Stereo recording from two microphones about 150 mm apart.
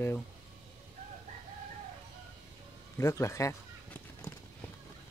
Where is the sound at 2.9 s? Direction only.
20° left (ahead or behind).